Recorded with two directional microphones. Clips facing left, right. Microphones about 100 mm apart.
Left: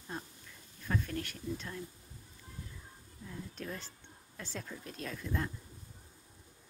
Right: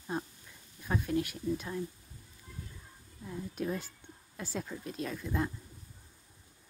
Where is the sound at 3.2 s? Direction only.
15° right (ahead or behind).